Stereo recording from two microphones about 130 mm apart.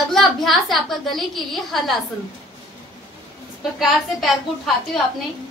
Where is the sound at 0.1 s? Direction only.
Centre (ahead or behind).